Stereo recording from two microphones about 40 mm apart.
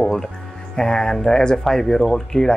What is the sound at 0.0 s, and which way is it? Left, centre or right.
Music, centre.